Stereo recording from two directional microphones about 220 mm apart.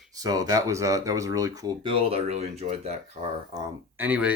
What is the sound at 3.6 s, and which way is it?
Speech, 10° right (ahead or behind).